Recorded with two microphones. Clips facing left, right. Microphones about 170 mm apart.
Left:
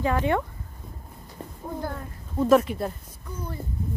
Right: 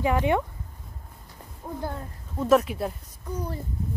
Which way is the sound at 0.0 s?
15° right (ahead or behind).